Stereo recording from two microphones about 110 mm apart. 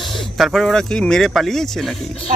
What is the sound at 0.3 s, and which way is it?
Speech, centre (ahead or behind).